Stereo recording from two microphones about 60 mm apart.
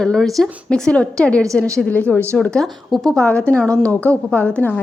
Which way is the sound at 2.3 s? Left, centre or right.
Centre.